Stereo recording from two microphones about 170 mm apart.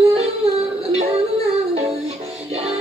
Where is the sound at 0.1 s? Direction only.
35° right (ahead or behind).